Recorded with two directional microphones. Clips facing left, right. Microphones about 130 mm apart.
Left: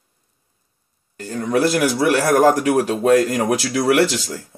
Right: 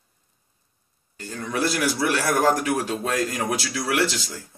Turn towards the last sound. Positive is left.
turn(degrees=60)  # may be behind; listen again after turning